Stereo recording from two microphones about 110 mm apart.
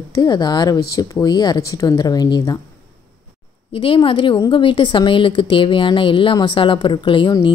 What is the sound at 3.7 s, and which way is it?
A woman's voice, 55° left (ahead or behind).